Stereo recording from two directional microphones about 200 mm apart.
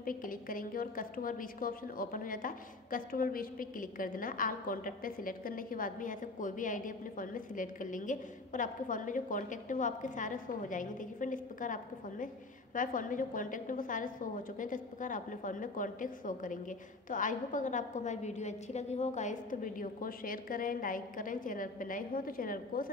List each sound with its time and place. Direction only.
0.0 s a woman's voice: 45° left (ahead or behind)